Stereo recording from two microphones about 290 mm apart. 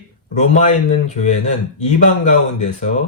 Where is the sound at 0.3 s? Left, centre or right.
Left.